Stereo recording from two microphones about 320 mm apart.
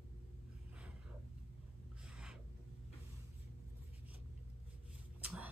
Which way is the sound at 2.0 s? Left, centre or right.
Centre.